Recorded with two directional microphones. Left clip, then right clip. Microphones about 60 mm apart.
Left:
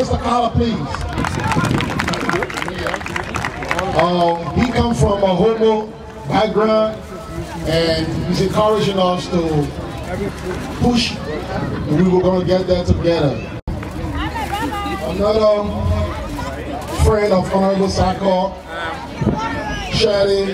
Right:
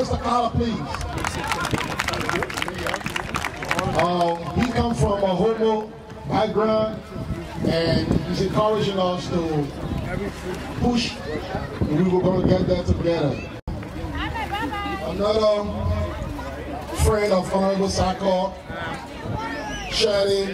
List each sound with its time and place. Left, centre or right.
0.0 s speech: centre
1.2 s run: right
2.4 s a sound: right
3.4 s run: right
4.0 s a man's voice: centre
10.8 s a man's voice: left
15.0 s a man's voice: right
17.0 s a man's voice: right
19.9 s speech: right